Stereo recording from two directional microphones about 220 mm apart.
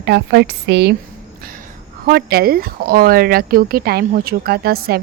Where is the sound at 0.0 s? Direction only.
50° right (ahead or behind).